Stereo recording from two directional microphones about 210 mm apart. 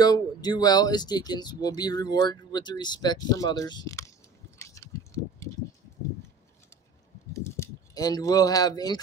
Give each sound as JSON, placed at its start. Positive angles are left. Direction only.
{"t": 0.0, "sound": "speech", "side_deg": 20}
{"t": 4.6, "sound": "a sound", "side_deg": 15}
{"t": 7.3, "sound": "speech", "side_deg": 15}